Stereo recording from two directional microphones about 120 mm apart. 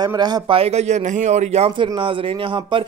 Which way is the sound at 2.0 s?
45° right (ahead or behind).